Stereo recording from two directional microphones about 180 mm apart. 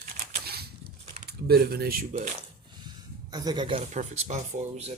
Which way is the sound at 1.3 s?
60° right (ahead or behind).